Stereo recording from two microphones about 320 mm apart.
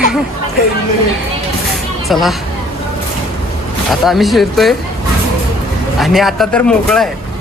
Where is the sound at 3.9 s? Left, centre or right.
Centre.